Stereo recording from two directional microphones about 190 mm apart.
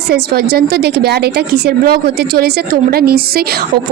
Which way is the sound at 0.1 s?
55° right (ahead or behind).